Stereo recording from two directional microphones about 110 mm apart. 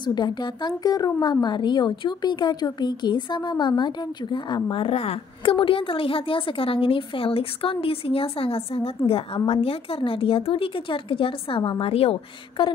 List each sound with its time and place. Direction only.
0.0 s a woman's voice: 40° left (ahead or behind); by 12.2 s 60° left (ahead or behind)
12.6 s a woman's voice: 50° left (ahead or behind)